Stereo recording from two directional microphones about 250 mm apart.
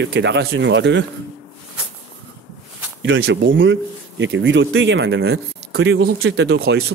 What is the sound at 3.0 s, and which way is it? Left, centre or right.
Speech, right.